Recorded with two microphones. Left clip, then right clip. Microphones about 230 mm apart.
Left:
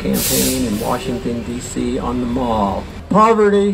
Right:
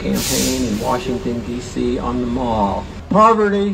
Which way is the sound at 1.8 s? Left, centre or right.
Left.